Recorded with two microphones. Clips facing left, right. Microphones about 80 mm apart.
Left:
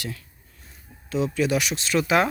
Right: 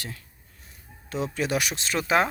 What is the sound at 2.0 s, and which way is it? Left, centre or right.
Speech, right.